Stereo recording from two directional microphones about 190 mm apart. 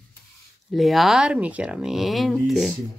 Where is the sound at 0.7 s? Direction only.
Centre (ahead or behind).